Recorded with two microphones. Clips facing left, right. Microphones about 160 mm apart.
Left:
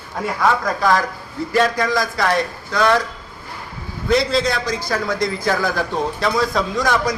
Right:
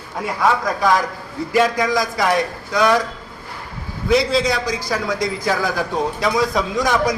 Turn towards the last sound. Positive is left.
turn(degrees=-20)  # may be behind; listen again after turning